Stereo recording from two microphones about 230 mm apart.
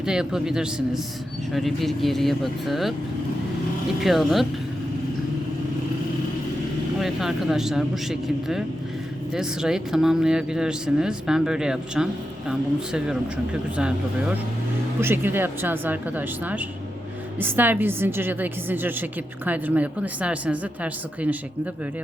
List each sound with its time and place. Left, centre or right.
0.0 s speech: centre
4.0 s speech: centre
7.0 s a woman's voice: centre